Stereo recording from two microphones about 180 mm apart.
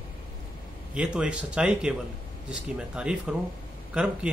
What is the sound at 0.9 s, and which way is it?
A woman's voice, 5° right (ahead or behind).